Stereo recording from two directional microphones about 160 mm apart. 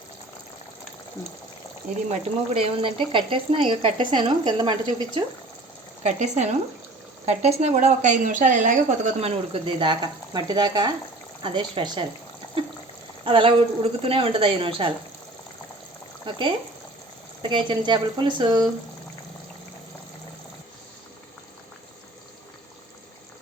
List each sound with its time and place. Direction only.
2.0 s speech: 40° right (ahead or behind)
6.0 s a woman's voice: 45° right (ahead or behind); by 12.0 s 30° right (ahead or behind)
13.2 s speech: 35° right (ahead or behind)
16.2 s speech: 30° right (ahead or behind)